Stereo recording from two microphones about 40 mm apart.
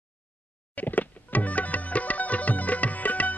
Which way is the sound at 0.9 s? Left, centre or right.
Left.